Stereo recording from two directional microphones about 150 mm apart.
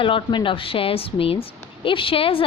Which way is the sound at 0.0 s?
35° left (ahead or behind).